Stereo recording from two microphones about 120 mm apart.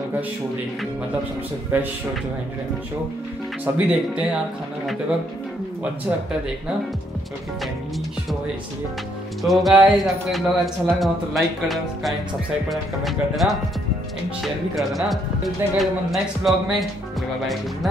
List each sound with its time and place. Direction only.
1.7 s speech: 15° right (ahead or behind)
3.7 s speech: 10° right (ahead or behind)
9.4 s speech: centre (ahead or behind)
14.8 s speech: centre (ahead or behind)